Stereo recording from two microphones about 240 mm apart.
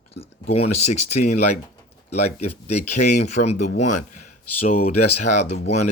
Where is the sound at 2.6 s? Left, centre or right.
Left.